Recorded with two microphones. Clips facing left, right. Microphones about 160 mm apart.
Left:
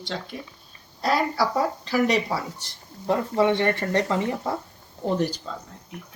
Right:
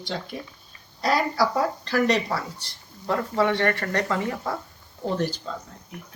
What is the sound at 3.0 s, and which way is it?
Speech, 20° left (ahead or behind).